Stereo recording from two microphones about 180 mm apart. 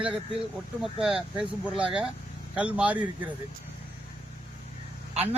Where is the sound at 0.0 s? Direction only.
5° right (ahead or behind).